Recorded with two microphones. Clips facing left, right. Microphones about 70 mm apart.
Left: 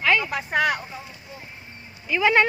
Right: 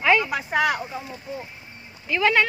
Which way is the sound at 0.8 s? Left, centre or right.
Centre.